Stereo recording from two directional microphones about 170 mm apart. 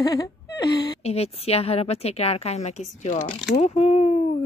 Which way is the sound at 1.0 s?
35° left (ahead or behind).